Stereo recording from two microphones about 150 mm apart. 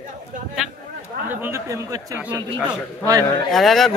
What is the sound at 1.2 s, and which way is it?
Speech, 15° right (ahead or behind).